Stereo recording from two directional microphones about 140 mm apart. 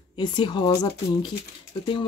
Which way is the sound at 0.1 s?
35° left (ahead or behind).